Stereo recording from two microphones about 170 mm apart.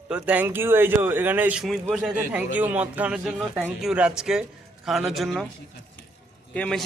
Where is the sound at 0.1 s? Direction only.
10° right (ahead or behind).